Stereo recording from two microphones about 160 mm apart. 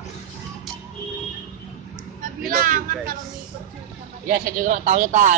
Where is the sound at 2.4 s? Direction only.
60° right (ahead or behind).